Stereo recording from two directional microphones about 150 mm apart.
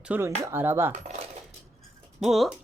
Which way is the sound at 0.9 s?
50° right (ahead or behind).